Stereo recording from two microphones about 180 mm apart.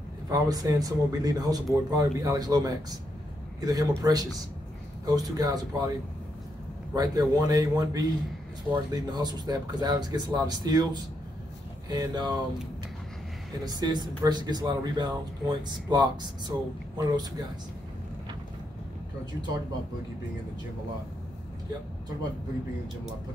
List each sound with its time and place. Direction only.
0.3 s speech: 20° right (ahead or behind)
7.0 s speech: 20° right (ahead or behind)
13.7 s speech: 20° right (ahead or behind)